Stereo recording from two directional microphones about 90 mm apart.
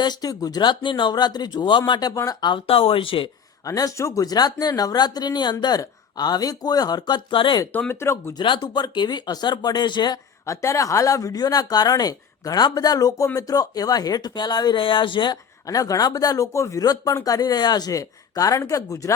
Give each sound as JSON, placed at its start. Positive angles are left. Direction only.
{"t": 0.0, "sound": "speech", "side_deg": 50}
{"t": 2.4, "sound": "speech", "side_deg": 75}
{"t": 3.7, "sound": "speech", "side_deg": 40}
{"t": 7.7, "sound": "speech", "side_deg": 25}
{"t": 8.4, "sound": "speech", "side_deg": 55}
{"t": 10.4, "sound": "speech", "side_deg": 35}
{"t": 14.8, "sound": "speech", "side_deg": 65}
{"t": 15.6, "sound": "speech", "side_deg": 40}